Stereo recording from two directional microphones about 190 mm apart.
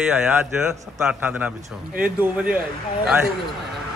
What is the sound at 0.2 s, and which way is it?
A man's voice, 5° right (ahead or behind).